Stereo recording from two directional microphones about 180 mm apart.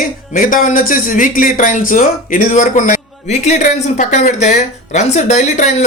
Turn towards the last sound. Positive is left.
turn(degrees=40)  # may be behind; listen again after turning